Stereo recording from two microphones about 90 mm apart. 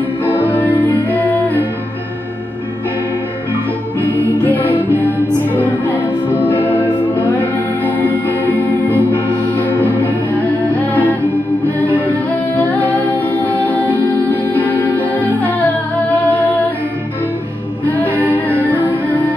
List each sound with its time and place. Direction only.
0.2 s music: 20° left (ahead or behind)
4.0 s music: 20° left (ahead or behind)
17.8 s music: 20° left (ahead or behind)